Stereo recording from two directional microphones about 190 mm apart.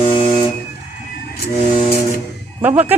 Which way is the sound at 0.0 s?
30° left (ahead or behind).